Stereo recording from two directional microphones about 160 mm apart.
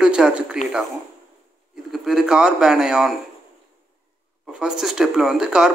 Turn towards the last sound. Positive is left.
turn(degrees=-5)  # may be behind; listen again after turning